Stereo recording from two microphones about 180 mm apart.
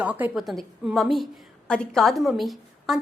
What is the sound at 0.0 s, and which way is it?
A woman's voice, 10° right (ahead or behind).